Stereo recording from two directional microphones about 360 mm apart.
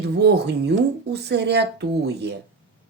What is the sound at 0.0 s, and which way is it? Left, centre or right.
Speech, right.